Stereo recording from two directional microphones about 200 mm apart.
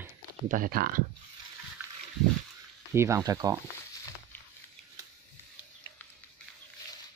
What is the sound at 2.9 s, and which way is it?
Speech, 15° right (ahead or behind).